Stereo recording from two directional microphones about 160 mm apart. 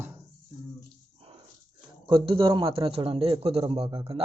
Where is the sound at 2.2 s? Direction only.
30° right (ahead or behind).